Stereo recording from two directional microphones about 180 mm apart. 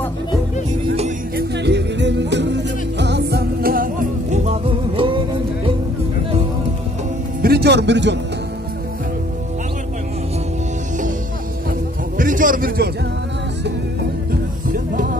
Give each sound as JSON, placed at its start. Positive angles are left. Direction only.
{"t": 1.3, "sound": "music", "side_deg": -70}
{"t": 4.5, "sound": "music", "side_deg": -30}
{"t": 7.4, "sound": "speech", "side_deg": -65}
{"t": 12.2, "sound": "a sound", "side_deg": -50}